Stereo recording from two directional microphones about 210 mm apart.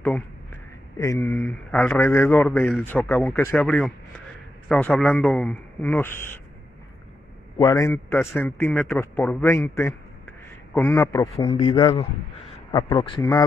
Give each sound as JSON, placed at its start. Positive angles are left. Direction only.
{"t": 0.9, "sound": "a man's voice", "side_deg": 15}
{"t": 7.5, "sound": "a man's voice", "side_deg": 15}